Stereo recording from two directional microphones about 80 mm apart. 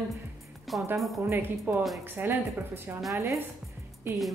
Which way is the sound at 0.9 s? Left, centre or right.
Centre.